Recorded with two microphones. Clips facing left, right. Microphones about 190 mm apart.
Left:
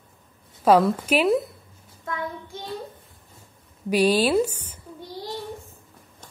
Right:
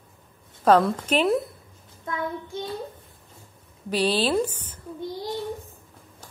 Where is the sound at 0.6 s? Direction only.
10° left (ahead or behind).